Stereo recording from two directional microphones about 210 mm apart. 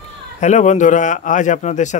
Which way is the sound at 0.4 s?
35° left (ahead or behind).